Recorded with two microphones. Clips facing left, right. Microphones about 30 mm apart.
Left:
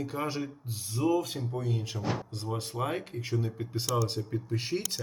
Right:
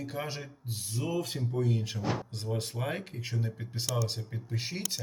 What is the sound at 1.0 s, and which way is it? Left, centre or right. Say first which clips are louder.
Speech: left 8 dB; centre.